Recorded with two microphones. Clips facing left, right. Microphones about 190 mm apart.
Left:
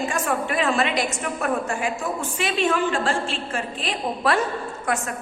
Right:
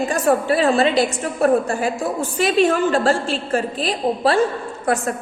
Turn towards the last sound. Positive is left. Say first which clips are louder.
# right 5 dB
turn(degrees=-35)  # may be behind; listen again after turning